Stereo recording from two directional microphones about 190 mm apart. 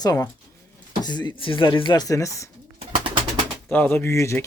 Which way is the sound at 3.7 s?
10° left (ahead or behind).